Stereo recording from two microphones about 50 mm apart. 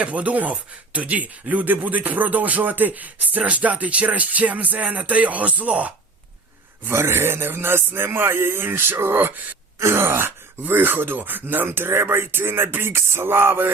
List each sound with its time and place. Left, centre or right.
0.0 s speech: right
6.8 s speech: right
9.3 s speech: right
9.7 s groan: right
10.7 s speech: right